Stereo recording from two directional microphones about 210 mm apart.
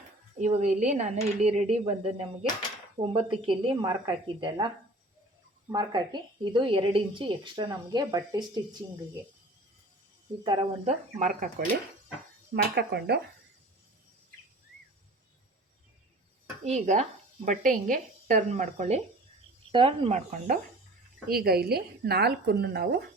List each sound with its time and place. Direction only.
0.3 s a woman's voice: 35° right (ahead or behind)
10.4 s a woman's voice: 25° right (ahead or behind)
11.2 s speech: 40° right (ahead or behind)
12.7 s speech: 50° right (ahead or behind)
16.6 s a woman's voice: 30° right (ahead or behind)
20.1 s speech: 40° right (ahead or behind)